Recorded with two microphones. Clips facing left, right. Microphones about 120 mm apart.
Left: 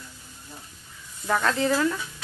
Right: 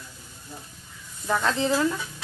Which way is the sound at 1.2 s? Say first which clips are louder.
Left 1 dB; 5° right (ahead or behind).